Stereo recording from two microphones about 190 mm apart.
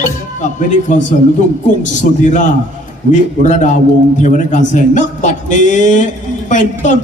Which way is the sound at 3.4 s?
40° left (ahead or behind).